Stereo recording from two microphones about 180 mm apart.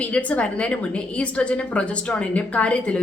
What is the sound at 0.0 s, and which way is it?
Speech, 10° left (ahead or behind).